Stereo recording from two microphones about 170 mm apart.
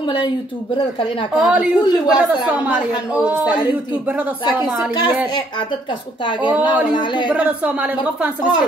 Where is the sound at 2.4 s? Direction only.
10° right (ahead or behind).